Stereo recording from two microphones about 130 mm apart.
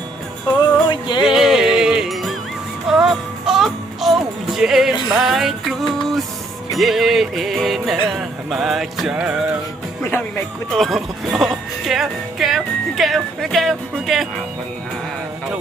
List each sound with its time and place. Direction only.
0.6 s music: 35° left (ahead or behind)
1.2 s music: 5° right (ahead or behind)
6.7 s speech: centre (ahead or behind)
10.0 s speech: 15° left (ahead or behind)
10.7 s speech: centre (ahead or behind)